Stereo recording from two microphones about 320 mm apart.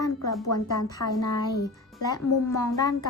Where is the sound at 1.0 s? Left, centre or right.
Left.